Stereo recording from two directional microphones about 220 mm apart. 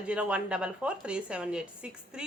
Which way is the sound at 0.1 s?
5° right (ahead or behind).